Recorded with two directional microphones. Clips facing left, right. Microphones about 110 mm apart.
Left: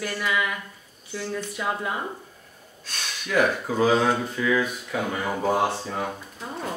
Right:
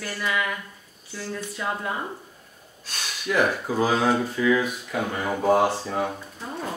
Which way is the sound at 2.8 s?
10° right (ahead or behind).